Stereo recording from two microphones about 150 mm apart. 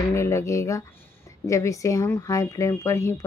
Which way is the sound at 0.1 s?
20° left (ahead or behind).